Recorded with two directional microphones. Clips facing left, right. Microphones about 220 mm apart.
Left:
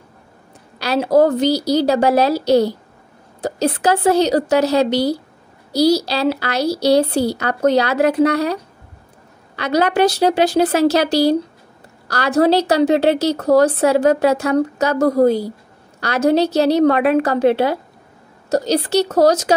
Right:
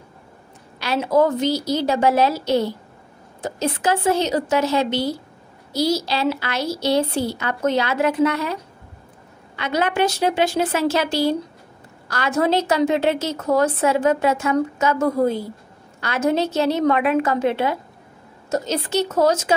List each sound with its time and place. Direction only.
0.7 s a woman's voice: 35° left (ahead or behind)
9.6 s a woman's voice: 40° left (ahead or behind)